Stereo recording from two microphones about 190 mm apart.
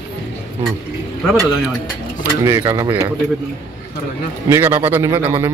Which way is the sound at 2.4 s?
15° right (ahead or behind).